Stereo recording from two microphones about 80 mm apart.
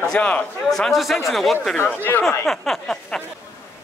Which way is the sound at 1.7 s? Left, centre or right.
Left.